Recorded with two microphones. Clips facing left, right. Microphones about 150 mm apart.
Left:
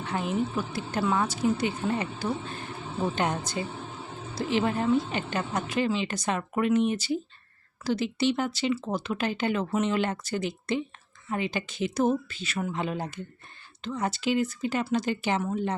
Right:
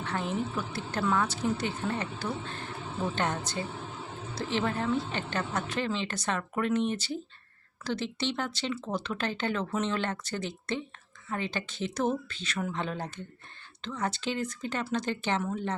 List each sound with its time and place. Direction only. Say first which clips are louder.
0.0 s a woman's voice: left 3 dB; 15° left (ahead or behind)